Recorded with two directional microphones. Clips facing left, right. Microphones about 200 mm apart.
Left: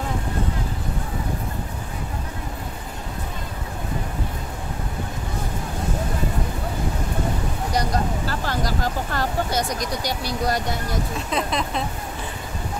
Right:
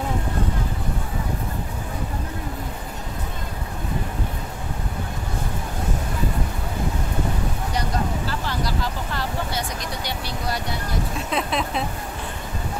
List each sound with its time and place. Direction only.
8.3 s vehicle: 45° left (ahead or behind)
11.2 s speech: centre (ahead or behind)